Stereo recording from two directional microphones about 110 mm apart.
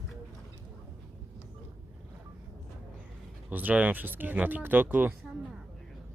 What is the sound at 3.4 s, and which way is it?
Speech, 15° right (ahead or behind).